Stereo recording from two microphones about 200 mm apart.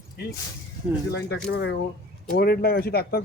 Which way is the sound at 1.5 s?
55° left (ahead or behind).